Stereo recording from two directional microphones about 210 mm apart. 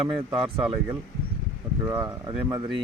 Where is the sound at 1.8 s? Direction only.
15° right (ahead or behind).